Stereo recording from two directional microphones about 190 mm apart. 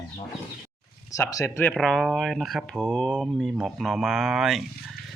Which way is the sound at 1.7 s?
Centre (ahead or behind).